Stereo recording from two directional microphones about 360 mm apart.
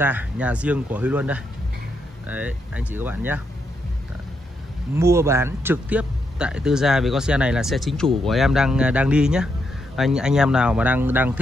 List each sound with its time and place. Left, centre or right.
0.0 s speech: centre
4.9 s speech: centre